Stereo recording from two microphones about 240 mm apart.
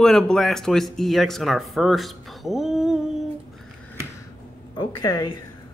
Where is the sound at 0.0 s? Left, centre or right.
Centre.